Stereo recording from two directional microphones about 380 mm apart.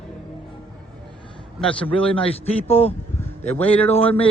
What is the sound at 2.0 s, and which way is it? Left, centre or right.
A man's voice, centre.